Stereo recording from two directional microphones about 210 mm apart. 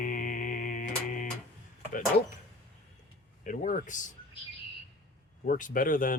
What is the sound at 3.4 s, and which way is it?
Speech, 40° left (ahead or behind).